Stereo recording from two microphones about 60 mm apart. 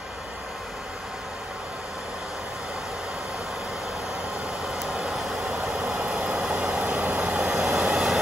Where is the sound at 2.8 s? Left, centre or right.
Centre.